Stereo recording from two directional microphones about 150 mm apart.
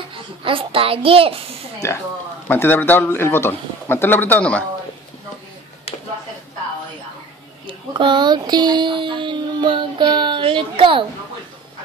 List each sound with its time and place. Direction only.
0.1 s a child's voice: 35° right (ahead or behind)
1.8 s a man's voice: 20° left (ahead or behind)
7.6 s a sound: 35° right (ahead or behind)